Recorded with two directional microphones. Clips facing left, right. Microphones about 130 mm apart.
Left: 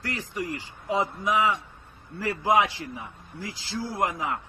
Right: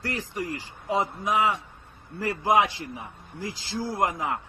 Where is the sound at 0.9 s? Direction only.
20° right (ahead or behind).